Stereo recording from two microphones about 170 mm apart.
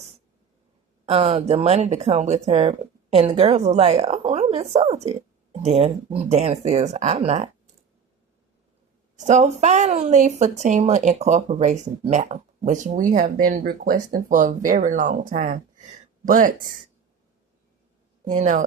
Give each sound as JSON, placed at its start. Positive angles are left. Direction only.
{"t": 1.0, "sound": "a woman's voice", "side_deg": -35}
{"t": 9.1, "sound": "speech", "side_deg": -45}
{"t": 18.3, "sound": "speech", "side_deg": -45}